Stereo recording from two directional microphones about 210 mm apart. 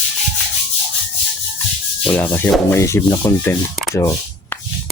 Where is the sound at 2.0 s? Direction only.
10° left (ahead or behind).